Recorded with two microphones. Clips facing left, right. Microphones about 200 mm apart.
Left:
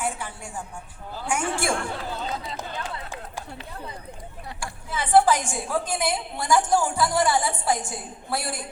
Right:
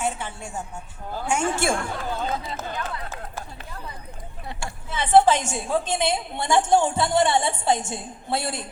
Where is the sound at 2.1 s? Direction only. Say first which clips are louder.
Right 4 dB; 50° right (ahead or behind).